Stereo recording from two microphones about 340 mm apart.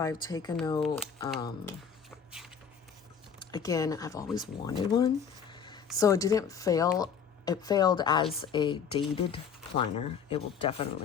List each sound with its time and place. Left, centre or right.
0.0 s speech: centre
2.0 s dog: centre
3.5 s speech: centre
4.8 s a sound: centre
6.0 s speech: centre